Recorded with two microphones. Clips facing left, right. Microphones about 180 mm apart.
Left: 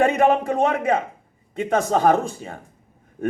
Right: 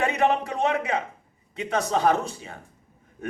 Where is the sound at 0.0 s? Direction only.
50° left (ahead or behind).